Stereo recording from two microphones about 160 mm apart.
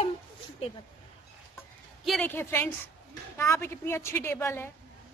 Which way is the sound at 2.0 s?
Centre (ahead or behind).